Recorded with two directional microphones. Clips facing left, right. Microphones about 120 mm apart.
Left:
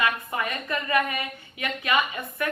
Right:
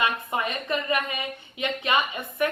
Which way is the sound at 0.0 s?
25° right (ahead or behind).